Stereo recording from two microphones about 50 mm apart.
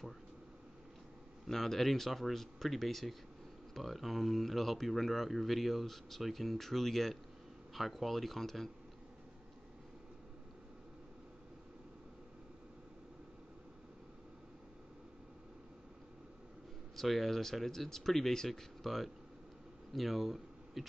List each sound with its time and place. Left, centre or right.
1.5 s speech: centre
16.9 s speech: centre